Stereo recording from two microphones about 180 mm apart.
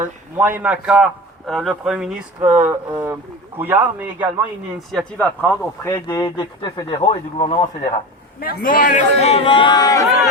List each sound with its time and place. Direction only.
0.3 s a man's voice: 10° right (ahead or behind)
4.9 s speech: 5° left (ahead or behind)
5.9 s speech: 20° left (ahead or behind)
8.4 s a man's voice: 50° left (ahead or behind); by 10.1 s 20° left (ahead or behind)